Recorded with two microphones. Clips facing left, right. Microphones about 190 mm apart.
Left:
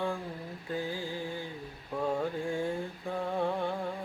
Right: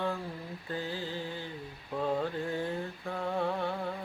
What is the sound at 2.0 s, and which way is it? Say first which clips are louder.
Mantra: even; 10° left (ahead or behind).